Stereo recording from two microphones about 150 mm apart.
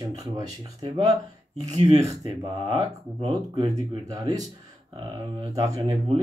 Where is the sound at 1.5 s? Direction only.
45° right (ahead or behind).